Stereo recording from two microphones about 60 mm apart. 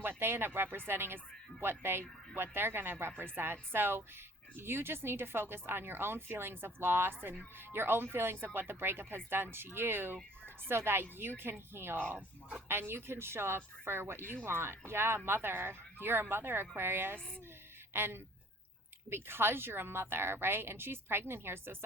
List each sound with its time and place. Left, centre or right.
0.0 s speech: right